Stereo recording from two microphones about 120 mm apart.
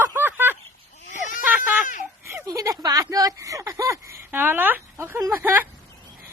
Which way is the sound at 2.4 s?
30° right (ahead or behind).